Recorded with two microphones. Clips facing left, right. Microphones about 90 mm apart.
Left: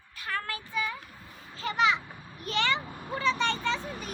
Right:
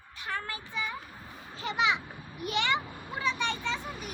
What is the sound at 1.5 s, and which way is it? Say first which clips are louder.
Children playing: left 2 dB; 20° right (ahead or behind).